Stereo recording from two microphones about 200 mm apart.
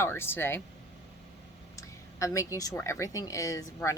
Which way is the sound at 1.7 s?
15° left (ahead or behind).